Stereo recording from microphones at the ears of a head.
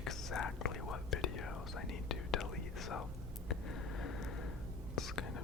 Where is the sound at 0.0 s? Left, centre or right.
Left.